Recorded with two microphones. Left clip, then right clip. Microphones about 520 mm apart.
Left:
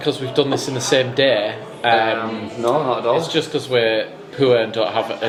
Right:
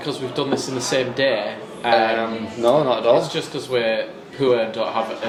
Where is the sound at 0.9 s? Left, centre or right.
Left.